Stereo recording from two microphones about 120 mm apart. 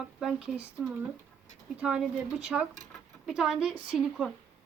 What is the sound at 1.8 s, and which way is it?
Speech, 5° right (ahead or behind).